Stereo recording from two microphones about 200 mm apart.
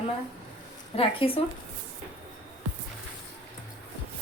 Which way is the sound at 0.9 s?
30° left (ahead or behind).